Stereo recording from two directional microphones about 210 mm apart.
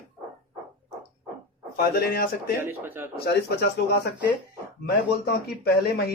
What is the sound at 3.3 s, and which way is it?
Speech, 50° left (ahead or behind).